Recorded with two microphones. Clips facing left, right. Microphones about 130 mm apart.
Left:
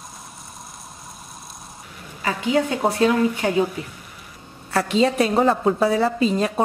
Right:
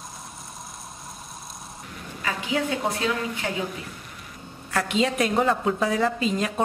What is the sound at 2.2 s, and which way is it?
A woman's voice, 40° left (ahead or behind).